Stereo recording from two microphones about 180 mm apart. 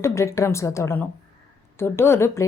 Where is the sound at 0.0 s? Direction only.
15° left (ahead or behind).